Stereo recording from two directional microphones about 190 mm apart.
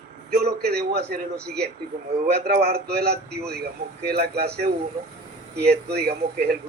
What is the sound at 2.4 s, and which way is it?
Speech, 55° right (ahead or behind).